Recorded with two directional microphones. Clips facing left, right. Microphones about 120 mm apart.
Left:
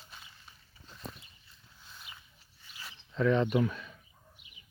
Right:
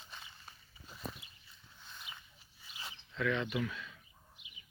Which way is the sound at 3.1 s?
35° left (ahead or behind).